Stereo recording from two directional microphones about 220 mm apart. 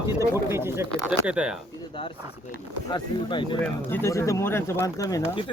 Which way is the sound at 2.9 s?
20° left (ahead or behind).